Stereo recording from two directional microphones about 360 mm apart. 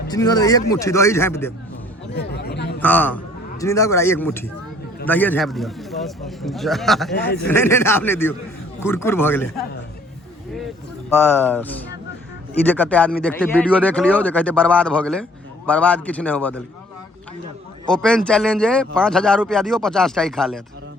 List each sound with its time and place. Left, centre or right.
0.1 s a man's voice: centre
2.1 s chatter: left
2.8 s a man's voice: centre
11.1 s speech: centre
17.8 s speech: centre